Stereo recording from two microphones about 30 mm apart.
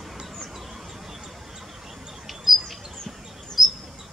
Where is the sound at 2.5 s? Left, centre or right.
Centre.